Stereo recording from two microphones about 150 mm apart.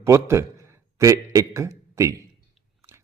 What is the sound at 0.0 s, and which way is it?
A man's voice, 20° right (ahead or behind).